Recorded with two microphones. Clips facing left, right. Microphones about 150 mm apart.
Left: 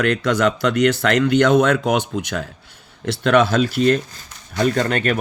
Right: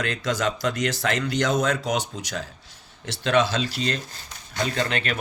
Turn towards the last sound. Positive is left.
turn(degrees=45)  # may be behind; listen again after turning